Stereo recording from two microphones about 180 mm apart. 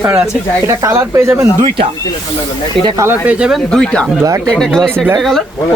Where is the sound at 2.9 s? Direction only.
15° right (ahead or behind).